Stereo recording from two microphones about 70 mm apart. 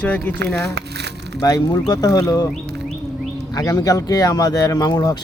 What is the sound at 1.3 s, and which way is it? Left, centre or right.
Speech, left.